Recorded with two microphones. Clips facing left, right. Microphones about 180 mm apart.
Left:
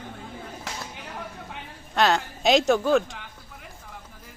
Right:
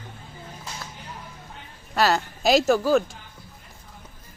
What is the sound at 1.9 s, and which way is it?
A woman's voice, 5° right (ahead or behind).